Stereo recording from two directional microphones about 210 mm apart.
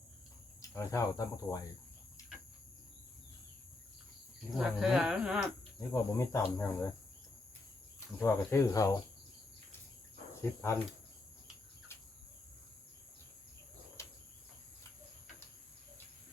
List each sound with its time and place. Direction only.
0.8 s speech: 15° left (ahead or behind)
4.5 s speech: centre (ahead or behind)
5.9 s speech: 15° left (ahead or behind)
8.2 s speech: 10° left (ahead or behind)
10.4 s speech: 10° left (ahead or behind)
14.0 s cricket: 15° left (ahead or behind)